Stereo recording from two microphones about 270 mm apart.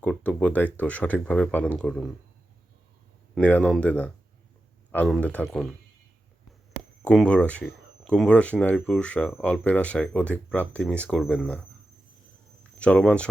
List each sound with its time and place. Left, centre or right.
0.0 s speech: centre
3.3 s speech: centre
7.0 s speech: centre
12.8 s speech: centre